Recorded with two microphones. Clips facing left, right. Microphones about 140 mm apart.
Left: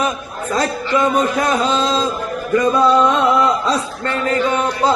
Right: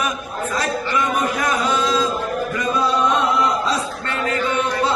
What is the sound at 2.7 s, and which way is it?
Chant, 55° left (ahead or behind).